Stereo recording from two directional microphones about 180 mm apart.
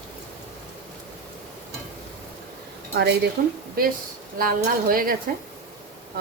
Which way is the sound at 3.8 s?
55° right (ahead or behind).